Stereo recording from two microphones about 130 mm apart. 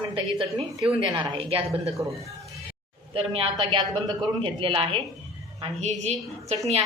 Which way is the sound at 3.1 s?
45° right (ahead or behind).